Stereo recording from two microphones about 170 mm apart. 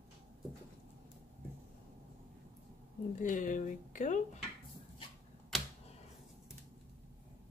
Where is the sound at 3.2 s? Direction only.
50° left (ahead or behind).